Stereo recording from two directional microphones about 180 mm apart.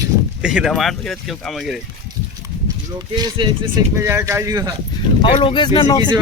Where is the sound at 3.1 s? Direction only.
25° right (ahead or behind).